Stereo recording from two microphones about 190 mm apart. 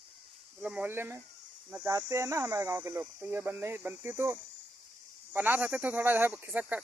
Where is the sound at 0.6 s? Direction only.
10° right (ahead or behind).